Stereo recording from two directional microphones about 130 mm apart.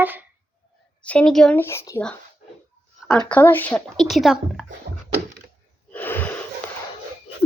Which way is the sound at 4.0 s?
Centre (ahead or behind).